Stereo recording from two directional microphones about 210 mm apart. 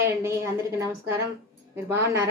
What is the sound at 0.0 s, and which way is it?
A woman's voice, 15° right (ahead or behind).